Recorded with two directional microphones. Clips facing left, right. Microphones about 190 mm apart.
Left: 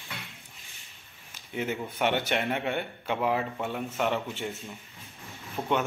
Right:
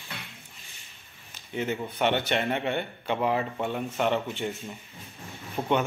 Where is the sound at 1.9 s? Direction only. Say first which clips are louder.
Right 1 dB; 10° left (ahead or behind).